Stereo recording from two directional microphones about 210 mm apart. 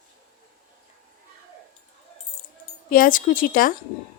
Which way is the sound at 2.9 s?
40° left (ahead or behind).